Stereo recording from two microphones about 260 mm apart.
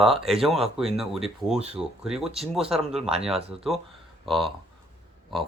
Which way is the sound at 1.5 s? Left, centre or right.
Right.